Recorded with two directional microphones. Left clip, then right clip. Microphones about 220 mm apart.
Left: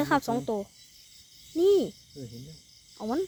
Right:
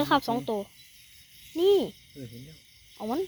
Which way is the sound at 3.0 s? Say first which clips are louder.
Even; 5° left (ahead or behind).